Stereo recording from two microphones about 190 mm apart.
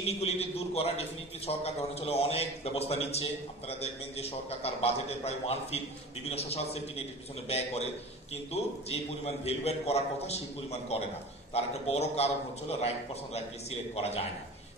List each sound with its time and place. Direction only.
0.0 s a man's voice: 35° left (ahead or behind)